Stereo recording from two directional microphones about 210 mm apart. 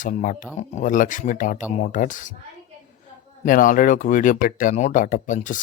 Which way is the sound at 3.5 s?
40° left (ahead or behind).